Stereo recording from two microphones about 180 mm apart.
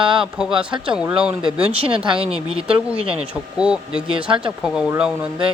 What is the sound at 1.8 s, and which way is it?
Speech, 30° right (ahead or behind).